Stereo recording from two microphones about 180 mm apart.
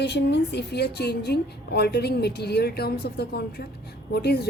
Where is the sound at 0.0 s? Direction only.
70° left (ahead or behind).